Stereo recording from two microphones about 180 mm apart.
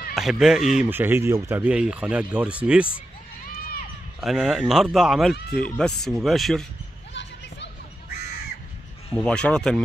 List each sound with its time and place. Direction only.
0.1 s speech: centre (ahead or behind)
3.4 s run: 55° left (ahead or behind)
4.2 s speech: centre (ahead or behind)
5.3 s speech: 65° left (ahead or behind)
5.8 s speech: centre (ahead or behind)
9.1 s speech: 5° left (ahead or behind)